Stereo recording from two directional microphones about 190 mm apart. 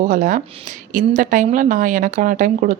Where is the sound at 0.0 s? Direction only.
40° right (ahead or behind).